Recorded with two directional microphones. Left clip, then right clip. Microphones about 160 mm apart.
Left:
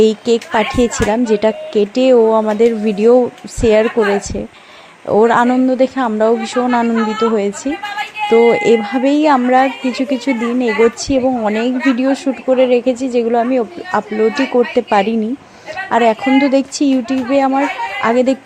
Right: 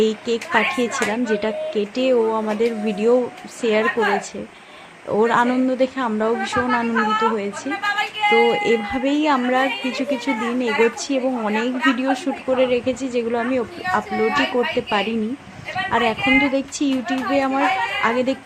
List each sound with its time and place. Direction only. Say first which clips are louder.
0.0 s speech: left 8 dB; 40° left (ahead or behind)
5.0 s speech: left 6 dB; 40° left (ahead or behind)